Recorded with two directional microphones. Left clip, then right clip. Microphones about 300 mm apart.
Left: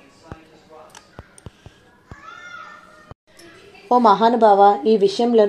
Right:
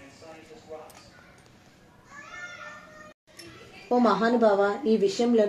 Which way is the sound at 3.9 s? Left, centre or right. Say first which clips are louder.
Left 9 dB; centre.